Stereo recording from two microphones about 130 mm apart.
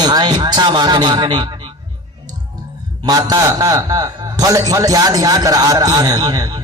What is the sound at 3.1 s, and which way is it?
A man's voice, 30° right (ahead or behind).